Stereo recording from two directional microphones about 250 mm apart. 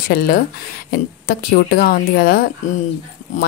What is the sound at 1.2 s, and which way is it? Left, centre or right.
Speech, left.